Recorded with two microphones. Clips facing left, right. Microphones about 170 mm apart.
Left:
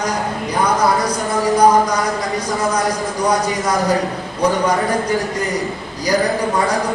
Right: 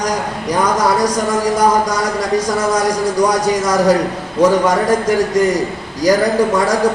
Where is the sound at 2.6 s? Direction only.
90° right.